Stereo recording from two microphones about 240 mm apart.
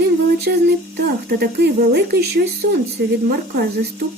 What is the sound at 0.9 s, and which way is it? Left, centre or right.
Speech, right.